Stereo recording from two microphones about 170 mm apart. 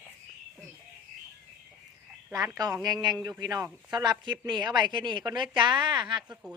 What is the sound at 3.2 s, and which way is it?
Speech, 20° right (ahead or behind).